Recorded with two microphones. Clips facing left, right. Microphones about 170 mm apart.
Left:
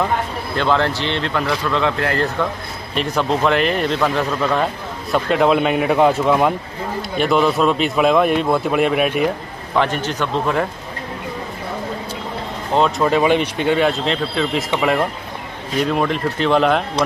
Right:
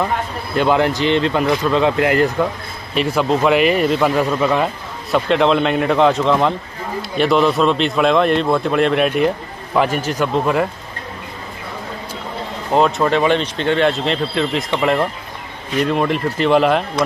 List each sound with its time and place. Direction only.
0.6 s a man's voice: 15° right (ahead or behind)
2.9 s a man's voice: 5° right (ahead or behind)
9.8 s a man's voice: 10° right (ahead or behind)
12.7 s a man's voice: centre (ahead or behind)